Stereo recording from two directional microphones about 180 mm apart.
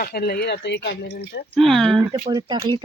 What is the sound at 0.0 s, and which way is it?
Speech, 60° left (ahead or behind).